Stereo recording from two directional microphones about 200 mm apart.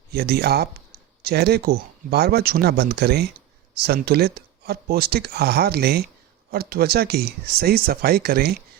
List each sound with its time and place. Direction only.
0.1 s speech: 55° right (ahead or behind)